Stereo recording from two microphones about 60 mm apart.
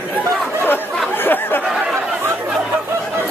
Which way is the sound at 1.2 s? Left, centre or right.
Left.